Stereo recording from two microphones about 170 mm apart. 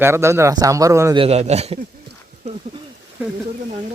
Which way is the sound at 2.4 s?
40° right (ahead or behind).